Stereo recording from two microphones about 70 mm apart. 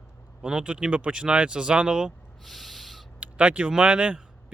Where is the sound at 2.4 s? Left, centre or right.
Centre.